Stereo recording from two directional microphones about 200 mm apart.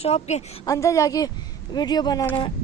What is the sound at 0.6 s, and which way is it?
A woman's voice, 15° left (ahead or behind).